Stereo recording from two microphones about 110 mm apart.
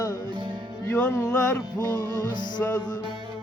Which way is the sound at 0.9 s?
15° left (ahead or behind).